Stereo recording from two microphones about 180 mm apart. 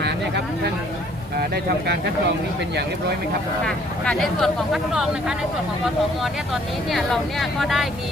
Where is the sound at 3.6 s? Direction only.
5° left (ahead or behind).